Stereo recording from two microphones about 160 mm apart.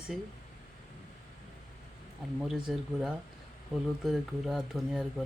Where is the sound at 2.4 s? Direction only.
5° right (ahead or behind).